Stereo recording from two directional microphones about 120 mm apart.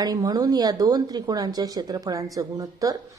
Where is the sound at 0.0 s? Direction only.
30° right (ahead or behind).